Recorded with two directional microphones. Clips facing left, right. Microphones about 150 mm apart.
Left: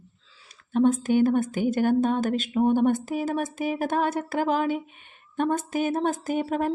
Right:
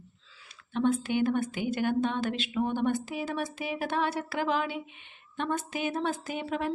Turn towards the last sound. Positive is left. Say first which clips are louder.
# left 7 dB
turn(degrees=45)  # may be behind; listen again after turning